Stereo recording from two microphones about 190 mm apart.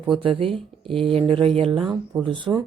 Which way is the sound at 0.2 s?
30° right (ahead or behind).